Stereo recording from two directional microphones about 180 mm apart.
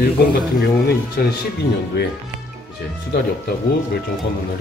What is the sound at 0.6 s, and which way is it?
Speech, 60° left (ahead or behind).